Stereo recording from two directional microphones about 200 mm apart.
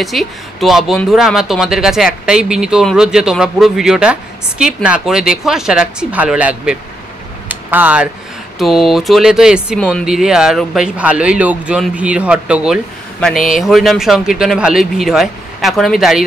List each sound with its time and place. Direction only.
0.0 s speech: centre (ahead or behind)
7.4 s a sound: 10° right (ahead or behind)
8.5 s speech: centre (ahead or behind)